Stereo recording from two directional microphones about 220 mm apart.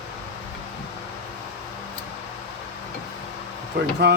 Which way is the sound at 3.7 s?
50° right (ahead or behind).